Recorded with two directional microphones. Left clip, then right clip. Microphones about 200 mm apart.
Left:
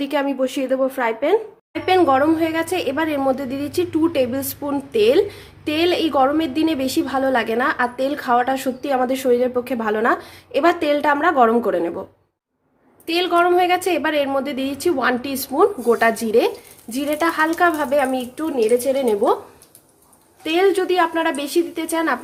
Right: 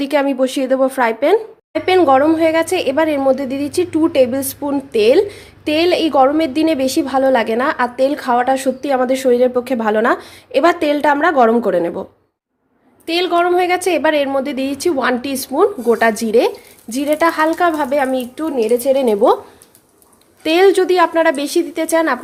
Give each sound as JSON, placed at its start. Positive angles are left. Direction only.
{"t": 0.0, "sound": "a woman's voice", "side_deg": -25}
{"t": 13.1, "sound": "a woman's voice", "side_deg": -15}
{"t": 20.4, "sound": "a woman's voice", "side_deg": -25}